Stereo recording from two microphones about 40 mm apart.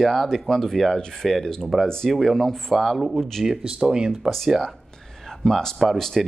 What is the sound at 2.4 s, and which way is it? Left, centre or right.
Speech, centre.